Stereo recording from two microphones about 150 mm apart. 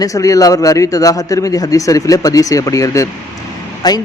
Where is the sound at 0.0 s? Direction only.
20° left (ahead or behind).